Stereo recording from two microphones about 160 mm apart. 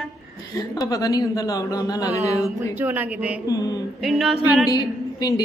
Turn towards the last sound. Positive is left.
turn(degrees=25)  # may be behind; listen again after turning